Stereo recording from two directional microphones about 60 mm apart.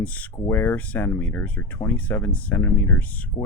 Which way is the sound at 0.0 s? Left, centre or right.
Left.